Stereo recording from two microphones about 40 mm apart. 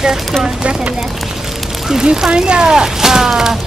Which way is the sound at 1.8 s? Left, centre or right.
Centre.